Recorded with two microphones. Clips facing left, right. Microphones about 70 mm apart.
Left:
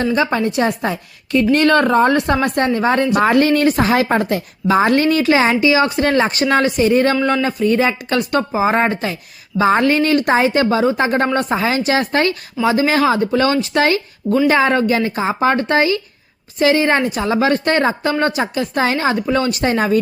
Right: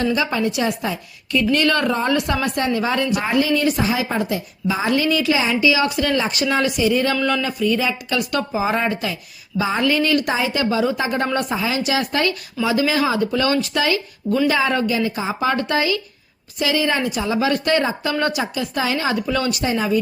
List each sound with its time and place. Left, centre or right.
0.0 s a woman's voice: left
3.2 s speech: left
5.7 s a woman's voice: left
7.2 s a man's voice: left
7.4 s a woman's voice: left
19.0 s a woman's voice: left
19.6 s speech: left